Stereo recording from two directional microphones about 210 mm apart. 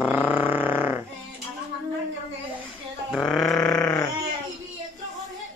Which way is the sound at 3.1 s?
Centre (ahead or behind).